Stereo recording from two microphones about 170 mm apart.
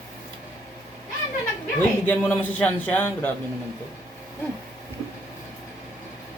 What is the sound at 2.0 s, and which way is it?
A man's voice, 10° left (ahead or behind).